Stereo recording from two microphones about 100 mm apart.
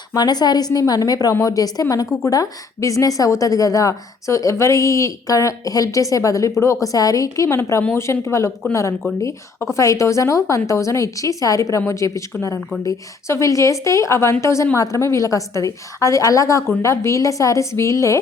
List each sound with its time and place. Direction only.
0.1 s a woman's voice: 45° left (ahead or behind)